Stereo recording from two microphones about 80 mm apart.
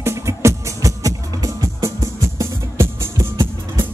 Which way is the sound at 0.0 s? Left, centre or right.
Right.